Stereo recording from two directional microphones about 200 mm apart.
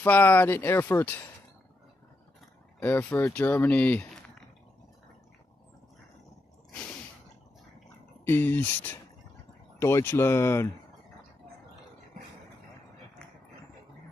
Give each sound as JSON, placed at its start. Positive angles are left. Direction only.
{"t": 0.0, "sound": "speech", "side_deg": 10}
{"t": 2.8, "sound": "speech", "side_deg": 10}
{"t": 8.3, "sound": "speech", "side_deg": 10}